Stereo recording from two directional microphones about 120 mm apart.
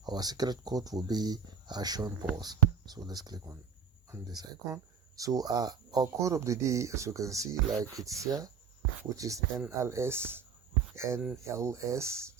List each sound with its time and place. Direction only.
0.0 s speech: 35° right (ahead or behind)